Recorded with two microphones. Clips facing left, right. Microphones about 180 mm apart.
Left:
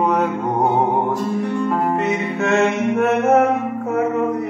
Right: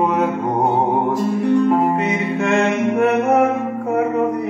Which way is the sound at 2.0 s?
Centre (ahead or behind).